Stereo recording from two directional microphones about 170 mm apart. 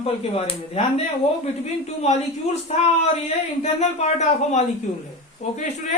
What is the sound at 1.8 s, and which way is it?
A woman's voice, 40° left (ahead or behind).